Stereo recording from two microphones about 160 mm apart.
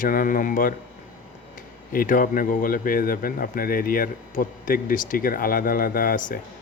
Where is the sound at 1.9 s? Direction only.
60° left (ahead or behind).